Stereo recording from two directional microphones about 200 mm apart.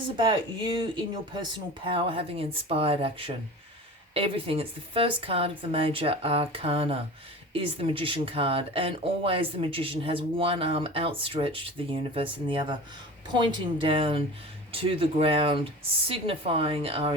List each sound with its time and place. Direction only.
0.2 s speech: 25° right (ahead or behind)